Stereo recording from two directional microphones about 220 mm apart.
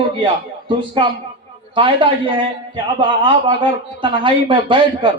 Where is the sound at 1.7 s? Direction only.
20° right (ahead or behind).